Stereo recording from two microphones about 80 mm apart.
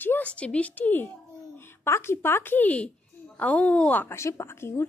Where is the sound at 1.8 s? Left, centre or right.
Left.